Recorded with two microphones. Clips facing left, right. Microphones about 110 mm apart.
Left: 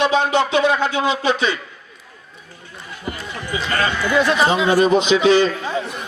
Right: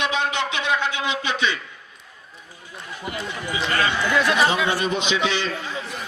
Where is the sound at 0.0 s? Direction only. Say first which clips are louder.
Left 7 dB; 35° left (ahead or behind).